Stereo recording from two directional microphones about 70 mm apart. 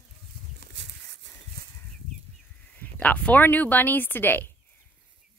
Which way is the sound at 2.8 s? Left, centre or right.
Centre.